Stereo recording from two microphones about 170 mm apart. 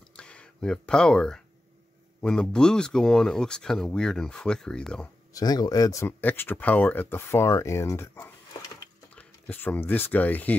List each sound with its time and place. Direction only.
0.1 s a sound: 5° left (ahead or behind)
2.2 s speech: 5° left (ahead or behind)
5.3 s speech: 25° left (ahead or behind)